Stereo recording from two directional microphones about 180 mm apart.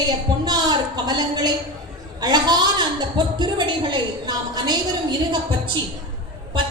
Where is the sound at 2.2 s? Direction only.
20° right (ahead or behind).